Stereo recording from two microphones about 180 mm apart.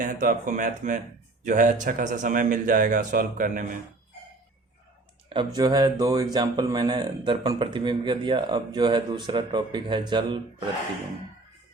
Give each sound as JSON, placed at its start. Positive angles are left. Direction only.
{"t": 0.0, "sound": "speech", "side_deg": -45}
{"t": 5.3, "sound": "speech", "side_deg": -25}